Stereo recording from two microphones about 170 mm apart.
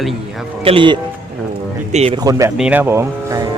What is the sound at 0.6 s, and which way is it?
Speech, 30° right (ahead or behind).